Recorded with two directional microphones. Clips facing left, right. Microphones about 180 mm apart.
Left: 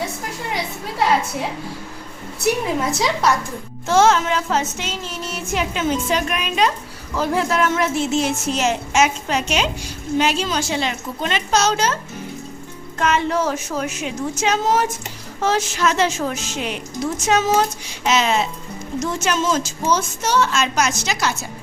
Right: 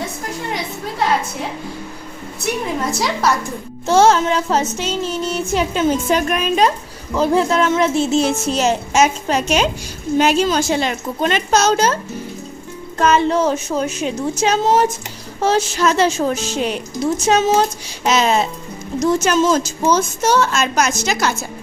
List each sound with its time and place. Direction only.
2.9 s music: centre (ahead or behind)
3.8 s a woman's voice: 35° right (ahead or behind)
4.9 s music: centre (ahead or behind)
5.5 s a woman's voice: 35° right (ahead or behind)
7.2 s a woman's voice: 30° right (ahead or behind); by 11.9 s 45° right (ahead or behind)
13.0 s a woman's voice: 35° right (ahead or behind)